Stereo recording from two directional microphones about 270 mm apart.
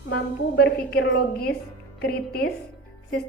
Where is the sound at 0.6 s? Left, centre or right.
Left.